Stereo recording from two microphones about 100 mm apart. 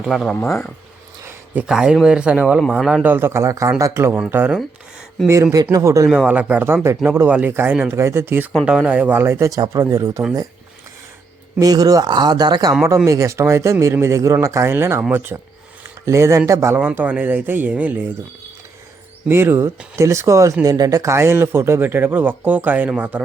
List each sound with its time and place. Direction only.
0.0 s speech: centre (ahead or behind)
1.6 s speech: 5° right (ahead or behind)
5.2 s speech: 30° right (ahead or behind)
6.1 s speech: 10° right (ahead or behind)
8.6 s speech: 10° right (ahead or behind); by 10.2 s 30° right (ahead or behind)
11.6 s speech: 40° right (ahead or behind)
13.1 s speech: 30° right (ahead or behind); by 18.0 s 15° right (ahead or behind)
19.3 s speech: 25° right (ahead or behind)